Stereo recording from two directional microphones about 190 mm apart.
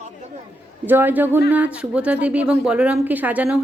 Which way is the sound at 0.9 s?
10° right (ahead or behind).